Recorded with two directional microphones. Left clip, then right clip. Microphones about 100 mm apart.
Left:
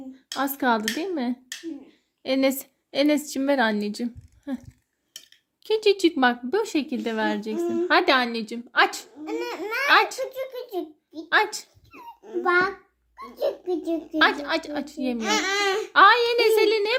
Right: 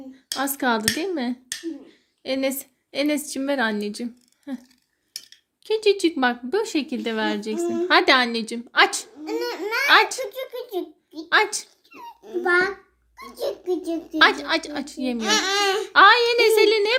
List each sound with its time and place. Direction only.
0.3 s speech: 20° left (ahead or behind)
2.2 s a woman's voice: 45° left (ahead or behind); by 9.0 s 5° left (ahead or behind)
9.2 s a child's voice: 90° left; by 9.9 s 70° left (ahead or behind)
9.9 s a woman's voice: 5° left (ahead or behind)
10.2 s a sound: 65° left (ahead or behind)
11.3 s speech: 10° left (ahead or behind)
12.5 s a child's voice: 75° left (ahead or behind)
14.0 s a woman's voice: 5° left (ahead or behind)
15.2 s a child's voice: 15° right (ahead or behind)
15.9 s a woman's voice: 5° left (ahead or behind)